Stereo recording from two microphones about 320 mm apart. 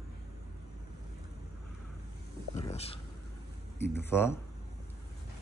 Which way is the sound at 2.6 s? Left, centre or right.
Centre.